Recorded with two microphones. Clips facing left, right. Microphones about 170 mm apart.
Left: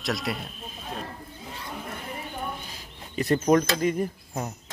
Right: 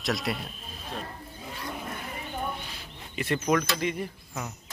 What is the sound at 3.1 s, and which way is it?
Speech, 40° left (ahead or behind).